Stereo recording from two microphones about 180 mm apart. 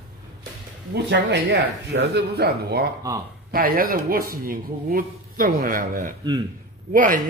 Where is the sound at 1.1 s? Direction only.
75° right (ahead or behind).